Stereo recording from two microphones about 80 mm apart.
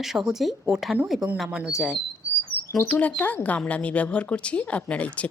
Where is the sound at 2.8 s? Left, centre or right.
Centre.